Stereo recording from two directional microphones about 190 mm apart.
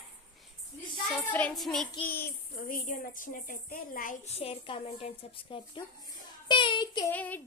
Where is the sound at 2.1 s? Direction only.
50° left (ahead or behind); by 7.1 s 20° left (ahead or behind).